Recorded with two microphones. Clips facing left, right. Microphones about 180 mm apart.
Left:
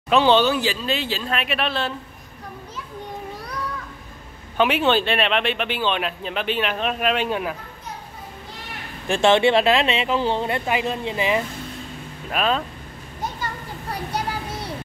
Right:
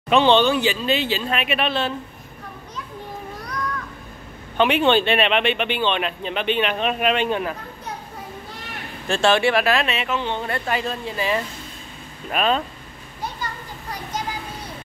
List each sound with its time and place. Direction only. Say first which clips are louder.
0.1 s speech: right 1 dB; 5° left (ahead or behind)
4.6 s speech: right 2 dB; 5° left (ahead or behind)
9.0 s speech: left 2 dB; 15° left (ahead or behind); by 10.4 s 35° left (ahead or behind)
10.4 s speech: left 2 dB; 15° left (ahead or behind)
12.3 s speech: right 1 dB; centre (ahead or behind)